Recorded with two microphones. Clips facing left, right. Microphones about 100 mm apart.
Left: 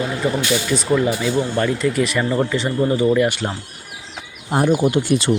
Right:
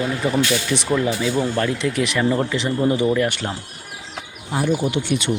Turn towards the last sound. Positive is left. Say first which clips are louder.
# left 4 dB
turn(degrees=35)  # may be behind; listen again after turning